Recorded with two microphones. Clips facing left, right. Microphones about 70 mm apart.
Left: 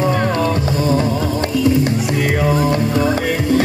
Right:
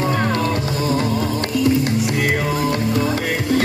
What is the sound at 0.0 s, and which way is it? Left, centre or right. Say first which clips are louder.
Music: left 3 dB; centre.